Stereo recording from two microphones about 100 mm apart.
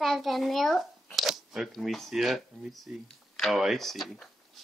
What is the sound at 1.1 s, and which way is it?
Speech, centre (ahead or behind).